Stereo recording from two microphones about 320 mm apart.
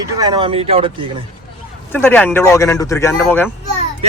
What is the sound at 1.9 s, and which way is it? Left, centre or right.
A man's voice, centre.